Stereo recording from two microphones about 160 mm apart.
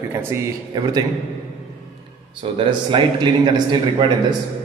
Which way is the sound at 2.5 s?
35° right (ahead or behind).